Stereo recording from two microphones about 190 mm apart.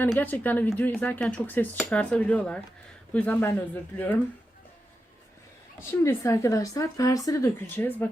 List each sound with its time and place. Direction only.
0.2 s speech: 10° left (ahead or behind)
5.9 s speech: 15° left (ahead or behind)